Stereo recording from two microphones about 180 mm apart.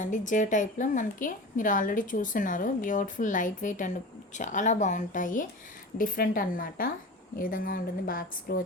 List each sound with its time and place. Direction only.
0.0 s a woman's voice: 45° left (ahead or behind)